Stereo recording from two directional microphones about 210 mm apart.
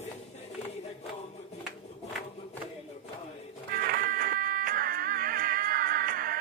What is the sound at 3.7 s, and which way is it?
Music, 45° right (ahead or behind).